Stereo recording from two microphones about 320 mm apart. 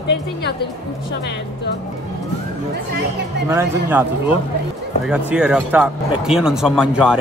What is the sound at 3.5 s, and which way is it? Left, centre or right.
Speech, centre.